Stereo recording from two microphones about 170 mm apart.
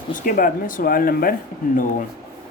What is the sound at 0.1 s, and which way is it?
Speech, 55° left (ahead or behind).